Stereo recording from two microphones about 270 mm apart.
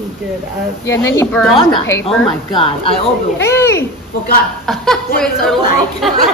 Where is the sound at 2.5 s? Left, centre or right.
Centre.